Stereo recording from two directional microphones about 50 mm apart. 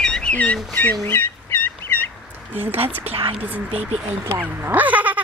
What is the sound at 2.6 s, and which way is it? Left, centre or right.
Speech, right.